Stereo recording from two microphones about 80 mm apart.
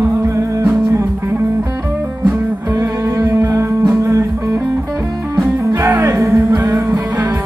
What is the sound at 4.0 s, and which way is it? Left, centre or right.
Music, right.